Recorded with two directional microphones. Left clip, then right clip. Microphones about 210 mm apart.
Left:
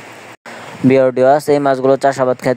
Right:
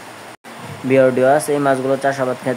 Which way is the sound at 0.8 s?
45° left (ahead or behind).